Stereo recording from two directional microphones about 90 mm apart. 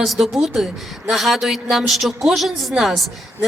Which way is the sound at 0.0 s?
Centre (ahead or behind).